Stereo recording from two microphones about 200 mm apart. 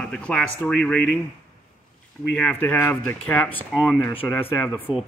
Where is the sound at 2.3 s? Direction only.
5° left (ahead or behind).